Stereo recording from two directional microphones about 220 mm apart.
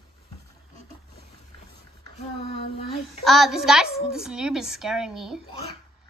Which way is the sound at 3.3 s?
Centre (ahead or behind).